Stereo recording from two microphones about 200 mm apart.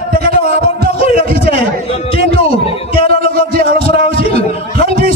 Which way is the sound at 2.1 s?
30° left (ahead or behind).